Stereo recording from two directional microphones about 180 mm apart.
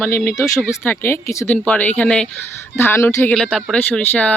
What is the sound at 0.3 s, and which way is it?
Speech, 15° left (ahead or behind).